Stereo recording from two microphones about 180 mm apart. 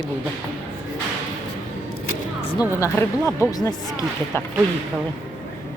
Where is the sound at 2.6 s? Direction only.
15° left (ahead or behind).